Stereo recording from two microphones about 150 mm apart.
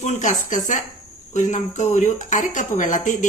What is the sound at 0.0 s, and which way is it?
A woman's voice, 50° left (ahead or behind).